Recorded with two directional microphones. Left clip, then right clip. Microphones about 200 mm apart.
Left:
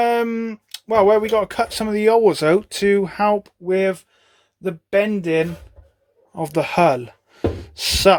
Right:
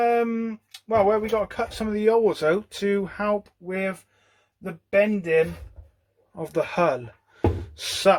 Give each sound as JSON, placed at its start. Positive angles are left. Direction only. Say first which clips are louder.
{"t": 0.0, "sound": "speech", "louder": "left 3 dB", "side_deg": 45}
{"t": 6.3, "sound": "speech", "louder": "left 6 dB", "side_deg": 35}